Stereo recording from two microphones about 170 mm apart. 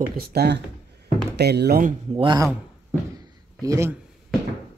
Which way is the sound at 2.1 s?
30° right (ahead or behind).